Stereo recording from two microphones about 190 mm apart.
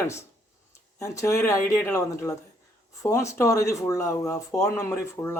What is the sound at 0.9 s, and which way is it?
Speech, 15° left (ahead or behind).